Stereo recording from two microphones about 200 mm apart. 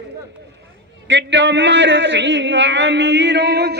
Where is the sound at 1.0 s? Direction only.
65° right (ahead or behind).